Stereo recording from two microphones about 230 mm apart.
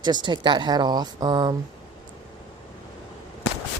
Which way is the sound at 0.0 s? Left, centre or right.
Centre.